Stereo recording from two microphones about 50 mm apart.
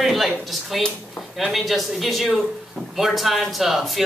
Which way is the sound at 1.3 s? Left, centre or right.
Centre.